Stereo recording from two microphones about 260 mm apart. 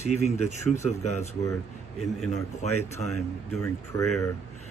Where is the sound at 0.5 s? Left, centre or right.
Left.